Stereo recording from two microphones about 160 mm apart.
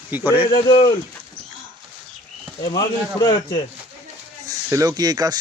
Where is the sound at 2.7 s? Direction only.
25° left (ahead or behind).